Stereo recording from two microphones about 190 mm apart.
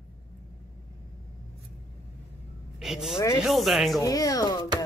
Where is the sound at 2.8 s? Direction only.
Centre (ahead or behind).